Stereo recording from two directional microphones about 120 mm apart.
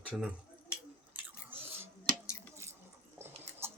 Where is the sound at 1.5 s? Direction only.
20° right (ahead or behind).